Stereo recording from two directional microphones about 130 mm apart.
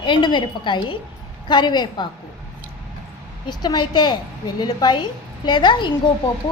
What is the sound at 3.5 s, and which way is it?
A woman's voice, 35° left (ahead or behind).